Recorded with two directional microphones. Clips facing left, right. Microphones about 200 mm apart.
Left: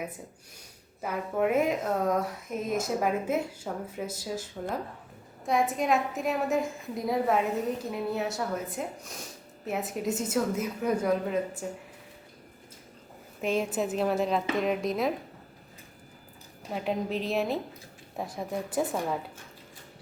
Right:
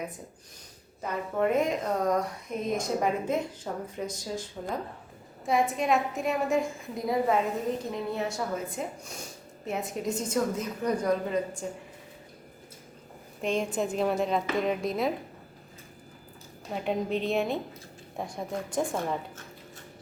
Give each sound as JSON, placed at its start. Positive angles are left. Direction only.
{"t": 1.0, "sound": "speech", "side_deg": 5}
{"t": 13.4, "sound": "speech", "side_deg": 5}
{"t": 16.7, "sound": "speech", "side_deg": 0}